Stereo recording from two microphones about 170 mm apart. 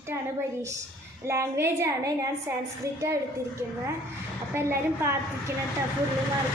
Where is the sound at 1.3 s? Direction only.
15° right (ahead or behind).